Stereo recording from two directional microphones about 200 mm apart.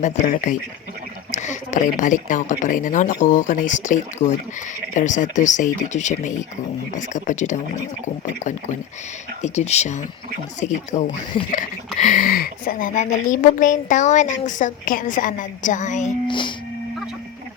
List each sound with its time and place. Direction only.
0.0 s a woman's voice: 35° left (ahead or behind)
9.4 s a woman's voice: 35° left (ahead or behind)
16.2 s speech: 25° left (ahead or behind)